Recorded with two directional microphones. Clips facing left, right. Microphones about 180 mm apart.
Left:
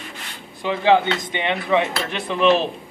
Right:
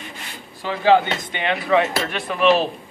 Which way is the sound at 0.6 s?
20° left (ahead or behind).